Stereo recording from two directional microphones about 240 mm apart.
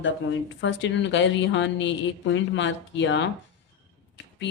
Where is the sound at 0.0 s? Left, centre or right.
Left.